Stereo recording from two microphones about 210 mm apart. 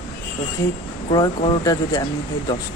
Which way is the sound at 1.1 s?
20° left (ahead or behind).